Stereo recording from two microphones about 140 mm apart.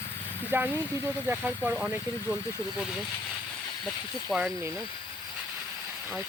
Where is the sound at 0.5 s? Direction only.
15° right (ahead or behind).